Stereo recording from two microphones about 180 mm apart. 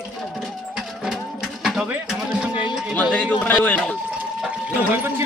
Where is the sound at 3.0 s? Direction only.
5° left (ahead or behind).